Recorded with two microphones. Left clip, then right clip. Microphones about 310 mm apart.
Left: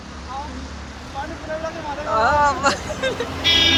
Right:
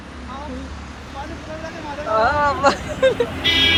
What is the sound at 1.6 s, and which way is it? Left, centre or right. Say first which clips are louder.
Vehicle: left 2 dB; left.